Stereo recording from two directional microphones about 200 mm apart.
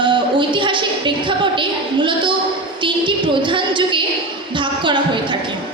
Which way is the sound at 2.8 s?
25° right (ahead or behind).